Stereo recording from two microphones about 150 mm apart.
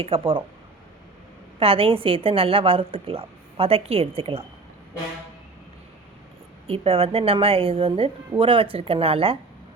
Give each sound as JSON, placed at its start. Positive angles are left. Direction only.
{"t": 0.0, "sound": "a woman's voice", "side_deg": -40}
{"t": 1.5, "sound": "a woman's voice", "side_deg": -40}
{"t": 6.7, "sound": "a woman's voice", "side_deg": -40}